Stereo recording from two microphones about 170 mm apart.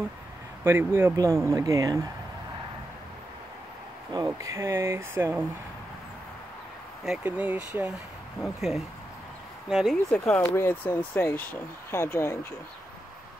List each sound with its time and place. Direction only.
0.7 s speech: 15° right (ahead or behind)
4.1 s speech: 20° right (ahead or behind)
7.1 s speech: 10° right (ahead or behind); by 12.5 s 15° left (ahead or behind)